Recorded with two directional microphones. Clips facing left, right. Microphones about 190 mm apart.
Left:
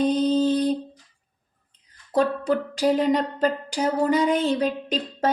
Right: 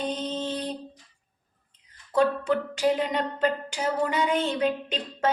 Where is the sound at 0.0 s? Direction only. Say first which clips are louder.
Left 10 dB; 35° left (ahead or behind).